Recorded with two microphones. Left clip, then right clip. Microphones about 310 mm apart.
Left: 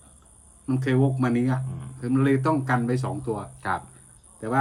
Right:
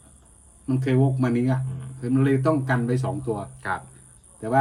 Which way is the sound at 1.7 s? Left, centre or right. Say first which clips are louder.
Right 1 dB; left.